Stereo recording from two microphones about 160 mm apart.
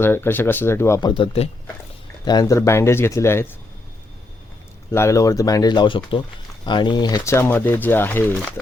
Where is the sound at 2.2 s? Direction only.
25° left (ahead or behind).